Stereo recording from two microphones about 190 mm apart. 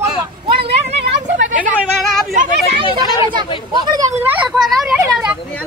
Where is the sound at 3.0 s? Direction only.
25° left (ahead or behind).